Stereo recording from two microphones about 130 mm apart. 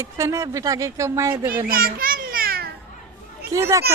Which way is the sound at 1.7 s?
90° right.